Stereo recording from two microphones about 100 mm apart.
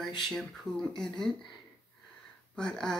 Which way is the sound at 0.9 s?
5° left (ahead or behind).